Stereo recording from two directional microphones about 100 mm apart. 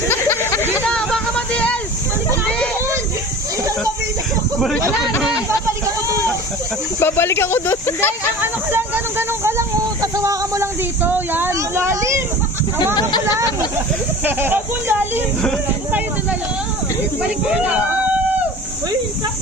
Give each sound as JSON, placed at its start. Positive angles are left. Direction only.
{"t": 0.1, "sound": "a sound", "side_deg": 25}
{"t": 0.9, "sound": "music", "side_deg": 10}
{"t": 5.5, "sound": "a sound", "side_deg": -30}
{"t": 7.0, "sound": "speech", "side_deg": 25}
{"t": 8.4, "sound": "speech", "side_deg": -20}
{"t": 11.0, "sound": "a child's voice", "side_deg": -20}
{"t": 14.3, "sound": "a child's voice", "side_deg": -20}
{"t": 17.5, "sound": "speech", "side_deg": -10}